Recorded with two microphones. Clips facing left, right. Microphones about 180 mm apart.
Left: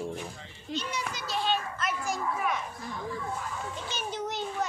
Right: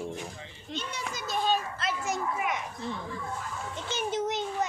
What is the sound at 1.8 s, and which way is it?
Children playing, 30° right (ahead or behind).